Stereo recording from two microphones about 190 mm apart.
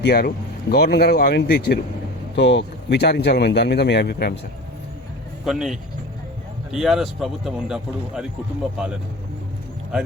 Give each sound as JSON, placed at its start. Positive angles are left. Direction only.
{"t": 0.0, "sound": "speech", "side_deg": 55}
{"t": 5.5, "sound": "speech", "side_deg": 0}